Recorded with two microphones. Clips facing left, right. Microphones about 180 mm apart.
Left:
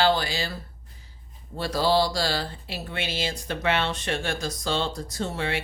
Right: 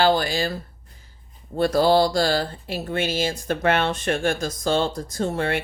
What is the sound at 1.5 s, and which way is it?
Speech, 50° right (ahead or behind).